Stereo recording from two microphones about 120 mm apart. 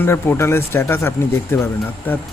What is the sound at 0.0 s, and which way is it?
Speech, 20° left (ahead or behind).